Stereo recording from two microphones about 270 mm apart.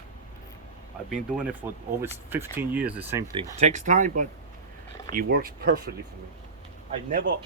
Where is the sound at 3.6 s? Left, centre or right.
Right.